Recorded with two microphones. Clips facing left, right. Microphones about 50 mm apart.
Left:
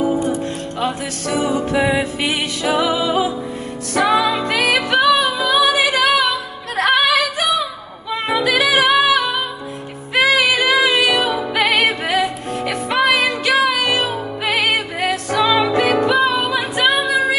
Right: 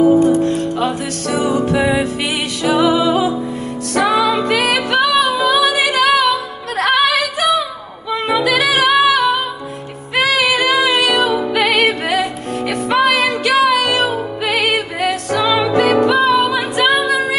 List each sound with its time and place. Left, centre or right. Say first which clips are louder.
0.7 s music: right 3 dB; centre